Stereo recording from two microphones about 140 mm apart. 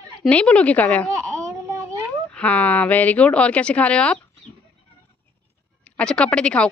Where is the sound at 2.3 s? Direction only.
10° left (ahead or behind).